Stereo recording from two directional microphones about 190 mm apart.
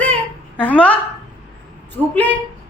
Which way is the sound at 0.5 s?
5° left (ahead or behind).